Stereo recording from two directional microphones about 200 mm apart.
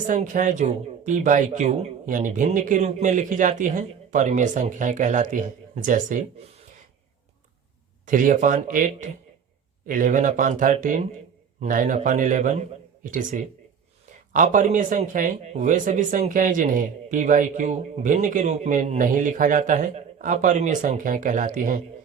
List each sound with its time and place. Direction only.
0.1 s speech: 40° right (ahead or behind)
8.0 s speech: 40° right (ahead or behind)